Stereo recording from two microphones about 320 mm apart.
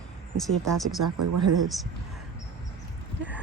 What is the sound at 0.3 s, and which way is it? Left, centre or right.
Speech, centre.